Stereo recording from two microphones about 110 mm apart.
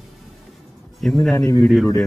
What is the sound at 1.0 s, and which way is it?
Speech, 5° left (ahead or behind).